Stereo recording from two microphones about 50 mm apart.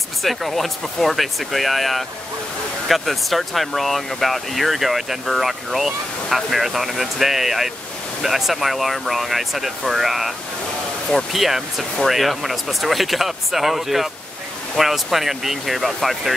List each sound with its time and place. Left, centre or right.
0.2 s speech: centre
11.4 s speech: centre